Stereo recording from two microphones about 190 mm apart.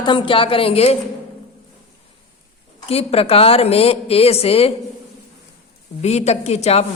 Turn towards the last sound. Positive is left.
turn(degrees=35)  # may be behind; listen again after turning